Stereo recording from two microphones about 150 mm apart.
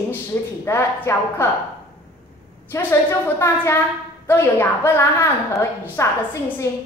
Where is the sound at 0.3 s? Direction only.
15° left (ahead or behind).